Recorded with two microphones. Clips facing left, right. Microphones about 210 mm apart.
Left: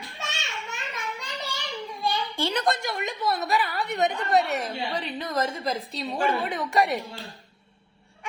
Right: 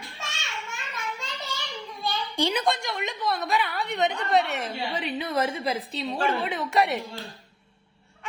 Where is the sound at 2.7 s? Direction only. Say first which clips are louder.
Even; centre (ahead or behind).